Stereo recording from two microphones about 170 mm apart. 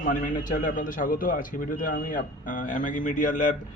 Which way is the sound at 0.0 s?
50° left (ahead or behind).